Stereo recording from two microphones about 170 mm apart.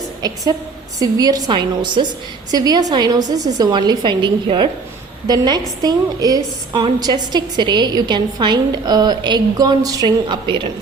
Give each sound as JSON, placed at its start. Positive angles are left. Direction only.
{"t": 0.2, "sound": "a woman's voice", "side_deg": -25}